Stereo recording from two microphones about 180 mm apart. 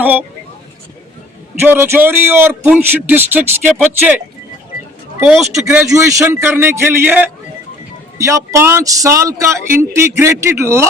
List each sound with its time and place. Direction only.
0.0 s speech: 10° right (ahead or behind)
1.6 s speech: 10° right (ahead or behind)
5.2 s speech: centre (ahead or behind)
5.5 s speech: 15° right (ahead or behind)